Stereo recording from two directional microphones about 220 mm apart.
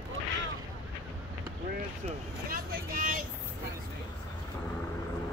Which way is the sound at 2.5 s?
40° right (ahead or behind).